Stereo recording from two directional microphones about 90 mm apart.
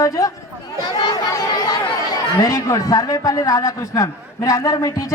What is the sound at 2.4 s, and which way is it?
A man's voice, 40° left (ahead or behind).